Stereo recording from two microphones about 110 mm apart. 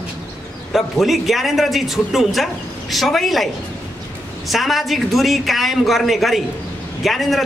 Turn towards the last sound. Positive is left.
turn(degrees=0)  # may be behind; listen again after turning